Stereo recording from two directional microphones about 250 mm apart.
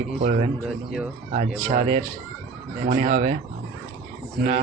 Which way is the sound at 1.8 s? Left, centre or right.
Right.